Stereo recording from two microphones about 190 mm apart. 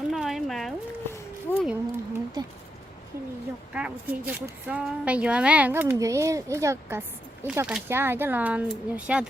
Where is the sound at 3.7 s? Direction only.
5° right (ahead or behind).